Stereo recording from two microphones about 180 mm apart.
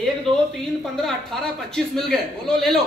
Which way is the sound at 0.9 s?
Centre (ahead or behind).